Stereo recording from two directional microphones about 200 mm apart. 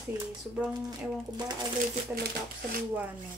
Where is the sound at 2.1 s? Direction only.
50° right (ahead or behind).